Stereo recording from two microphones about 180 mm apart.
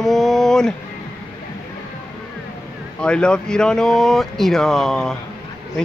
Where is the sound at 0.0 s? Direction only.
Centre (ahead or behind).